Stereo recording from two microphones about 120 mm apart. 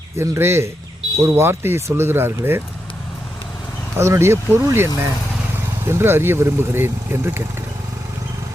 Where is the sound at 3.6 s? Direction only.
15° left (ahead or behind).